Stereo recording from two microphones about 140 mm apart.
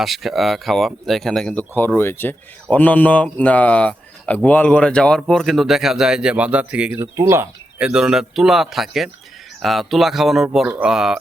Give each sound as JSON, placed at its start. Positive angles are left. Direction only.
{"t": 0.0, "sound": "speech", "side_deg": 0}
{"t": 2.0, "sound": "speech", "side_deg": 15}
{"t": 6.9, "sound": "speech", "side_deg": -20}
{"t": 7.8, "sound": "speech", "side_deg": -5}